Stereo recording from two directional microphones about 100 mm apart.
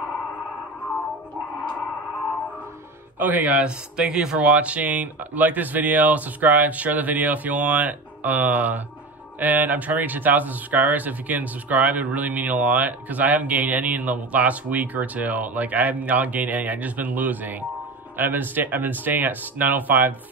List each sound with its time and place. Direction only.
3.2 s speech: 15° right (ahead or behind)